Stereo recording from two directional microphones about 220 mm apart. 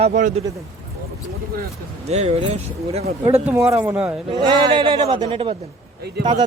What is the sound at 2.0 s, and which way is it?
A man's voice, 30° right (ahead or behind).